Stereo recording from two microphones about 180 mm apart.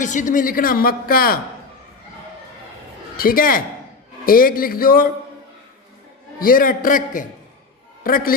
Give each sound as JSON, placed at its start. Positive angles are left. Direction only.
{"t": 0.0, "sound": "speech", "side_deg": 45}
{"t": 3.2, "sound": "speech", "side_deg": 55}
{"t": 6.4, "sound": "a man's voice", "side_deg": 50}